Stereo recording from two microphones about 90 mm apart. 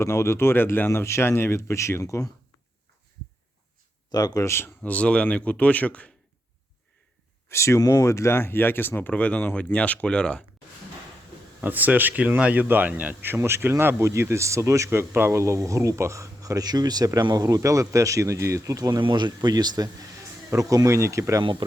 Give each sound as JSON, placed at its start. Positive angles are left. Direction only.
{"t": 0.0, "sound": "speech", "side_deg": 30}
{"t": 4.1, "sound": "speech", "side_deg": 45}
{"t": 4.4, "sound": "speech", "side_deg": 25}
{"t": 4.8, "sound": "speech", "side_deg": 15}
{"t": 7.4, "sound": "speech", "side_deg": 30}
{"t": 11.6, "sound": "speech", "side_deg": -20}
{"t": 18.9, "sound": "speech", "side_deg": -55}